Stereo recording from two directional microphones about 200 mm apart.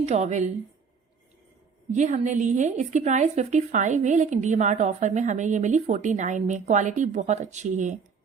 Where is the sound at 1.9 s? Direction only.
35° right (ahead or behind).